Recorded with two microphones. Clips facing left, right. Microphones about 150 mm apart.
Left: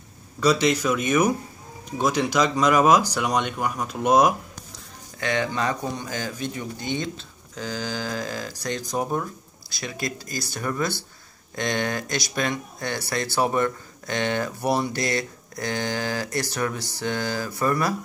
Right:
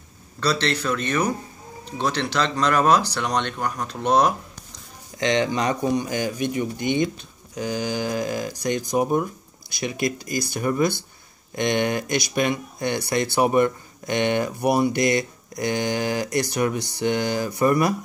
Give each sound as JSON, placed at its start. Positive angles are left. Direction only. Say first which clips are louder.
{"t": 0.4, "sound": "speech", "louder": "left 3 dB", "side_deg": 10}
{"t": 5.2, "sound": "speech", "louder": "right 3 dB", "side_deg": -20}